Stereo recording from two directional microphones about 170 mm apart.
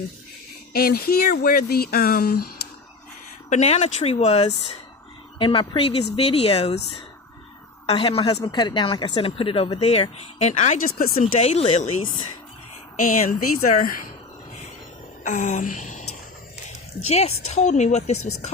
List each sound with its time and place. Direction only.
0.7 s speech: 65° left (ahead or behind)
3.5 s speech: 45° left (ahead or behind)
7.9 s speech: 35° left (ahead or behind); by 14.0 s 55° left (ahead or behind)
15.2 s a sound: 45° left (ahead or behind)
16.6 s speech: 40° left (ahead or behind)